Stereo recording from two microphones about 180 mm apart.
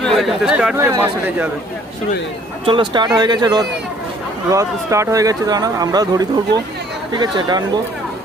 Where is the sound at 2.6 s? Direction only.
25° right (ahead or behind).